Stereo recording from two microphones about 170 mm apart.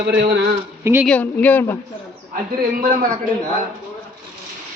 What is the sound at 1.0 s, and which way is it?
Speech, 10° left (ahead or behind).